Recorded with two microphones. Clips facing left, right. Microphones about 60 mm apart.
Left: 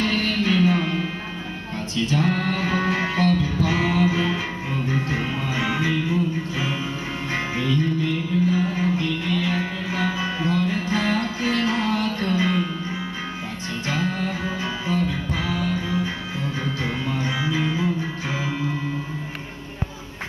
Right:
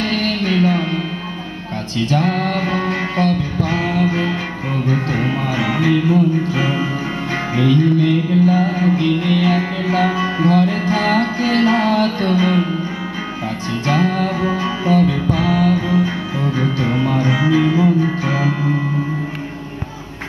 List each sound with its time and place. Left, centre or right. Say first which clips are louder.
0.0 s music: right 3 dB; right
2.0 s music: right 5 dB; right
4.8 s music: right 7 dB; right
7.5 s music: right 10 dB; right
13.8 s music: right 8 dB; right